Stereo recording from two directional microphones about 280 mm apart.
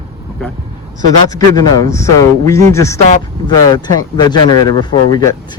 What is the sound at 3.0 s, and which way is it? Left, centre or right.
Speech, left.